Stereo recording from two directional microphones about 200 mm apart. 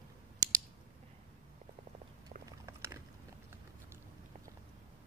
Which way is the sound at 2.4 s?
15° right (ahead or behind).